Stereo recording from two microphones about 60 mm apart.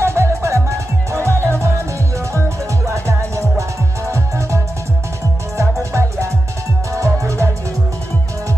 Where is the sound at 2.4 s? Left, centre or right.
Right.